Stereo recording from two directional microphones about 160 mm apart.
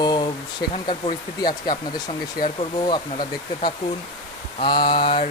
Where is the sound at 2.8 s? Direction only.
30° left (ahead or behind).